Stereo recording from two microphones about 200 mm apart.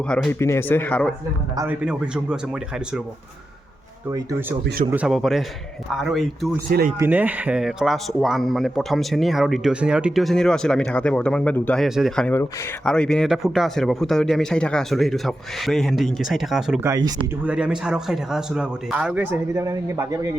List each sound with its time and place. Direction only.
0.1 s speech: 5° left (ahead or behind)
1.5 s a man's voice: 10° right (ahead or behind)
4.1 s a man's voice: 15° right (ahead or behind)
6.7 s speech: 50° right (ahead or behind)
7.0 s a man's voice: 10° right (ahead or behind)
16.8 s speech: 15° right (ahead or behind)
17.4 s a man's voice: 5° right (ahead or behind)